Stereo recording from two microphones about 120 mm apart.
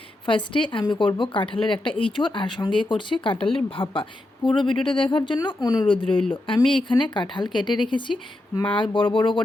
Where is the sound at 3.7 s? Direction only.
45° left (ahead or behind).